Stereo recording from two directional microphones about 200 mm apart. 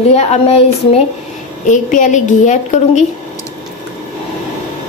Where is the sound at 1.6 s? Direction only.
40° left (ahead or behind).